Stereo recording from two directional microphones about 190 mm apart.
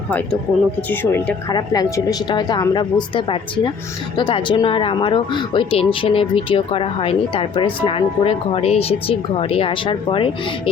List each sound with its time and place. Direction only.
0.9 s speech: 10° left (ahead or behind)
1.5 s speech: 20° left (ahead or behind)